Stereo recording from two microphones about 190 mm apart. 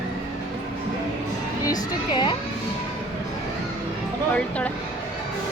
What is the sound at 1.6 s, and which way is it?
Speech, 20° left (ahead or behind).